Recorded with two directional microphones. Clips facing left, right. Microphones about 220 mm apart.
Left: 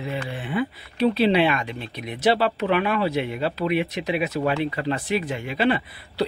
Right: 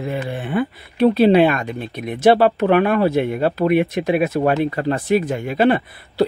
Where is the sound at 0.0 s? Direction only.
50° right (ahead or behind).